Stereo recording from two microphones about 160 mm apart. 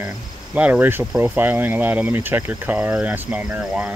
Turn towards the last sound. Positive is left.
turn(degrees=-5)  # may be behind; listen again after turning